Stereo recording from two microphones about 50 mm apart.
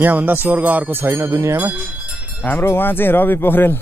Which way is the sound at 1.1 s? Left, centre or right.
Right.